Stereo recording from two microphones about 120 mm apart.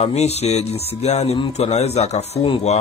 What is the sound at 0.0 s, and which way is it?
Speech, 65° left (ahead or behind).